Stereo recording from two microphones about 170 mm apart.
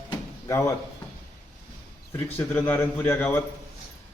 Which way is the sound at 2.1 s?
10° left (ahead or behind).